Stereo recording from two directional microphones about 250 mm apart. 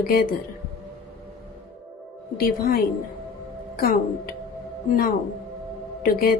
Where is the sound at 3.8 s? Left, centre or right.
Left.